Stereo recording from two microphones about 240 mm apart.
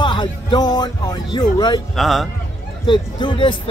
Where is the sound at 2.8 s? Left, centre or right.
Centre.